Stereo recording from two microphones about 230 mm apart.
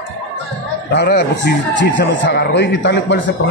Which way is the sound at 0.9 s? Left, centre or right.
Left.